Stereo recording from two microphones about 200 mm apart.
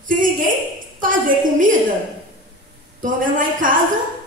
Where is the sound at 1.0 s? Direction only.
40° right (ahead or behind).